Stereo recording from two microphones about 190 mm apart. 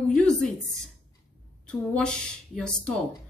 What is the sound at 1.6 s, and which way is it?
Speech, 5° left (ahead or behind).